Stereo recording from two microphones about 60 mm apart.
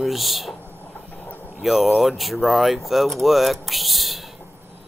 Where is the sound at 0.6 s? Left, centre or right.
Left.